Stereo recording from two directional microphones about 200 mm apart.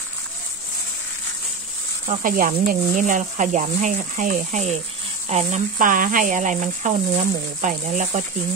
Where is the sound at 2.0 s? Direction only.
40° right (ahead or behind).